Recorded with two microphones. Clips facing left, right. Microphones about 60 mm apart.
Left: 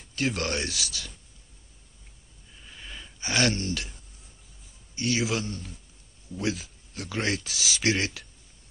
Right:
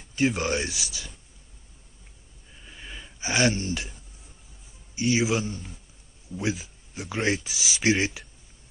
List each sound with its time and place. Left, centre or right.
0.1 s speech: centre
2.6 s gasp: centre
5.0 s a man's voice: centre